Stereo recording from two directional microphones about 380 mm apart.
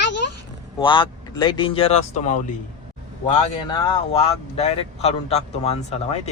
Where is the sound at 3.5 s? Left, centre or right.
Centre.